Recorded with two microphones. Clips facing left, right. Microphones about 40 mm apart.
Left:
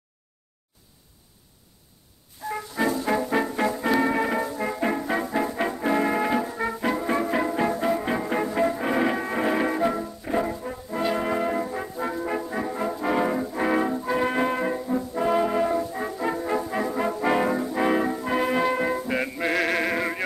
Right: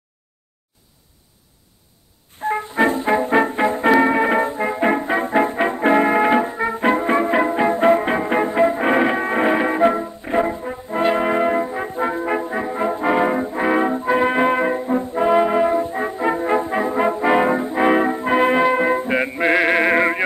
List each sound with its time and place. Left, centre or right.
2.4 s music: right
11.9 s brass instrument: right